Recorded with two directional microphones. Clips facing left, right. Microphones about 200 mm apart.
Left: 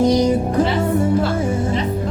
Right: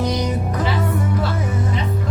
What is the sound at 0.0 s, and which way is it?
Music, 30° left (ahead or behind).